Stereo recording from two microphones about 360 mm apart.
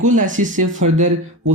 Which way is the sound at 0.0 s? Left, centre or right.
Right.